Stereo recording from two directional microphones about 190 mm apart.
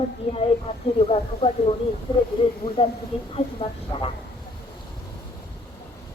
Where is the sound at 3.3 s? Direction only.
25° left (ahead or behind).